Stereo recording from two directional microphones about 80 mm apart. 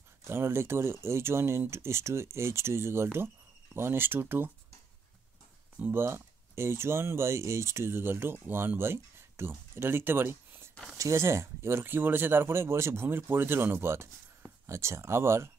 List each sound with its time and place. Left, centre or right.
0.2 s speech: right
5.8 s speech: right